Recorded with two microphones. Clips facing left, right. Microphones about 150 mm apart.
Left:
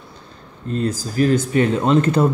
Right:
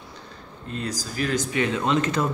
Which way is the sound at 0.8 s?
55° left (ahead or behind).